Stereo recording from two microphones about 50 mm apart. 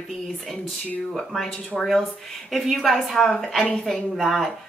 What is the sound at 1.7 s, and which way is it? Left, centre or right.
A woman's voice, centre.